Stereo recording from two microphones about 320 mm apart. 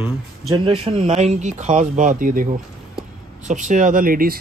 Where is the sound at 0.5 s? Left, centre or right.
Centre.